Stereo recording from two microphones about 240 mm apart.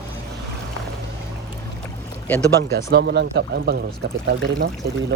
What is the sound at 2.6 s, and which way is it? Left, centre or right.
Speech, right.